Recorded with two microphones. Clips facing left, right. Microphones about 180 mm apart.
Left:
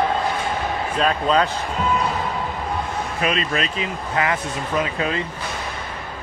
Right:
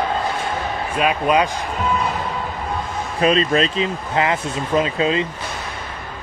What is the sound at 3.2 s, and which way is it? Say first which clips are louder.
Speech: right 7 dB; 35° right (ahead or behind).